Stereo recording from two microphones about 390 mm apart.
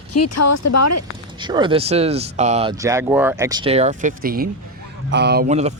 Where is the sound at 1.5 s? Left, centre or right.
Centre.